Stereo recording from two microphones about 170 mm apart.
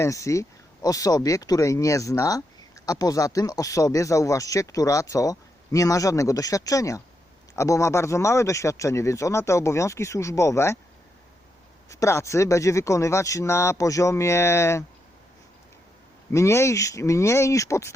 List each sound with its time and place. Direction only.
0.0 s speech: 20° left (ahead or behind)
11.9 s speech: 15° left (ahead or behind)
16.3 s speech: 15° left (ahead or behind)